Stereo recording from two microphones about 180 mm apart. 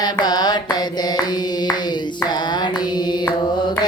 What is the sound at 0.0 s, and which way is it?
Music, 25° left (ahead or behind).